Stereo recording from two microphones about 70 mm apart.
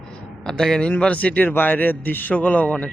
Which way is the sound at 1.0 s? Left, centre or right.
Centre.